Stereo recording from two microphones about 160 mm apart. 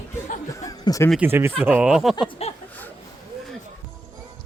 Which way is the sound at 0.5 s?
20° left (ahead or behind).